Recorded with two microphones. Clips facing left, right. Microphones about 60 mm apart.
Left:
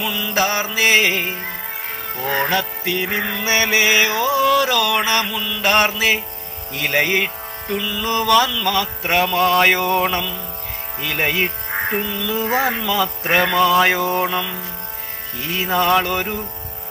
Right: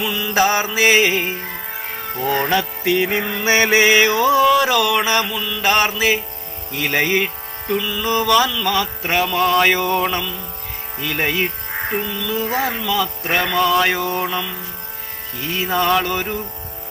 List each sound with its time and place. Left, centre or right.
0.0 s music: centre
2.6 s music: centre
12.2 s a sound: centre
15.4 s music: centre